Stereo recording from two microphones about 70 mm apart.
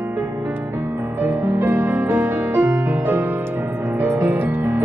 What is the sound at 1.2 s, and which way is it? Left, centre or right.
Music, right.